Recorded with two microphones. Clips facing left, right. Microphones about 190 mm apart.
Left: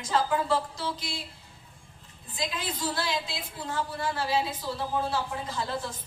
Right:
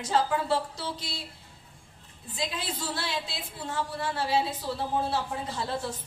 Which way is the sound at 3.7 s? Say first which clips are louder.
Left 1 dB; 25° right (ahead or behind).